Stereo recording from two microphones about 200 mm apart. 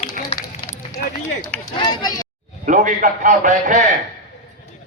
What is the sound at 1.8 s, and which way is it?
Speech, 20° left (ahead or behind).